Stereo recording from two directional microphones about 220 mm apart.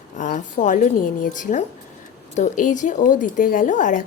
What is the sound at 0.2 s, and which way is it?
A woman's voice, 35° left (ahead or behind).